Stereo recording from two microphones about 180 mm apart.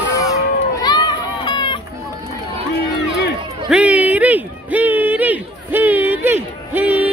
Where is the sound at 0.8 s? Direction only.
25° left (ahead or behind).